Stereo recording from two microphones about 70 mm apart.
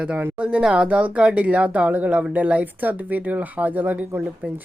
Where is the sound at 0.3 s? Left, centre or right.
Centre.